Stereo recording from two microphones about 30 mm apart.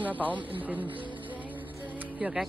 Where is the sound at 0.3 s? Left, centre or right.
Right.